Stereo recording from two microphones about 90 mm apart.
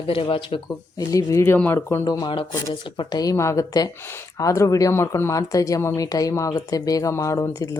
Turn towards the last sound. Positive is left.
turn(degrees=35)  # may be behind; listen again after turning